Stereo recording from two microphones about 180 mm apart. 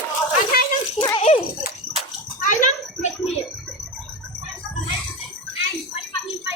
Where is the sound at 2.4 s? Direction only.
45° left (ahead or behind).